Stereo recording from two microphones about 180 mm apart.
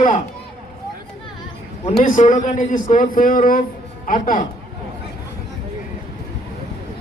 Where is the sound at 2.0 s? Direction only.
45° left (ahead or behind).